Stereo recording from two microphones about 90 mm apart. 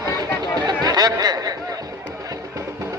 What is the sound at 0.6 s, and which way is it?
Chatter, 50° right (ahead or behind).